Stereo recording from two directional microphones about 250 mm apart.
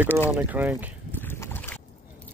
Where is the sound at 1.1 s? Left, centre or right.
Centre.